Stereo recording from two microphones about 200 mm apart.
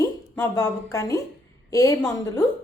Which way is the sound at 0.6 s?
15° left (ahead or behind).